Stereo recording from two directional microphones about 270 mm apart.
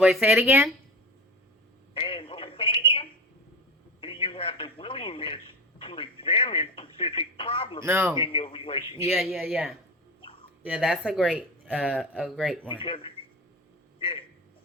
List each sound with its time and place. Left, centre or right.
0.0 s speech: centre
1.9 s telephone: centre
4.0 s radio: centre
5.8 s speech: centre
7.9 s a man's voice: centre
8.2 s a man's voice: centre
9.0 s speech: centre
12.7 s a man's voice: centre
14.0 s a sound: centre